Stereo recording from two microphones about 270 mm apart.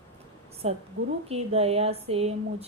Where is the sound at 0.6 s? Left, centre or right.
Right.